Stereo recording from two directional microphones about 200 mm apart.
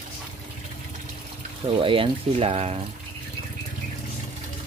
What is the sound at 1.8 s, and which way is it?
Speech, 25° right (ahead or behind).